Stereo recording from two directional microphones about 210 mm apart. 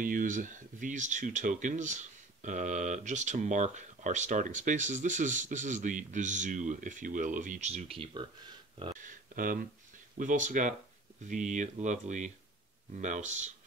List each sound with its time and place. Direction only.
0.0 s speech: 40° right (ahead or behind); by 8.3 s 25° right (ahead or behind)
9.0 s speech: 40° right (ahead or behind)